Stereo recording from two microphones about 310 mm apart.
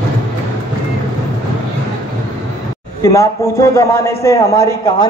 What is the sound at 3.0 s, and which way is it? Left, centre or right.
A man's voice, centre.